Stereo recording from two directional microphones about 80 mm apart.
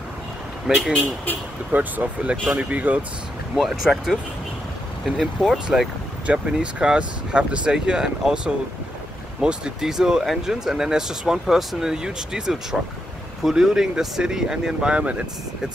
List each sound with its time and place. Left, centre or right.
0.7 s speech: centre
1.7 s speech: centre
3.5 s speech: centre